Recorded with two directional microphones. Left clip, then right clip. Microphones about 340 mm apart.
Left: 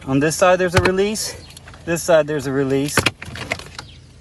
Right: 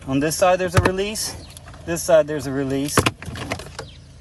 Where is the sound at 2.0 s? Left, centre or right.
Centre.